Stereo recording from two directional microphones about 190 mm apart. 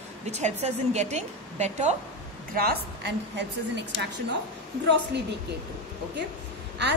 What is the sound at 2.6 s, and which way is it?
Speech, 60° right (ahead or behind).